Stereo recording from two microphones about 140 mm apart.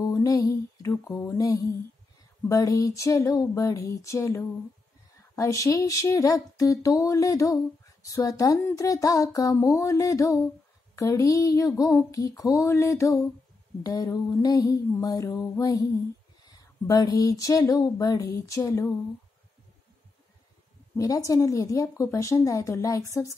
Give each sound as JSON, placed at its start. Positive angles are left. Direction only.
{"t": 0.0, "sound": "mantra", "side_deg": 25}
{"t": 2.4, "sound": "speech", "side_deg": 25}
{"t": 20.9, "sound": "speech", "side_deg": 25}